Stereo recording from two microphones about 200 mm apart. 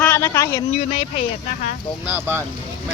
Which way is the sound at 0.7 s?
30° left (ahead or behind).